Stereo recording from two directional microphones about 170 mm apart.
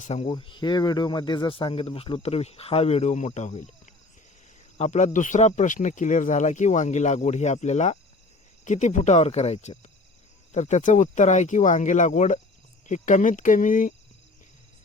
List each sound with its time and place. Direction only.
0.0 s speech: 40° left (ahead or behind)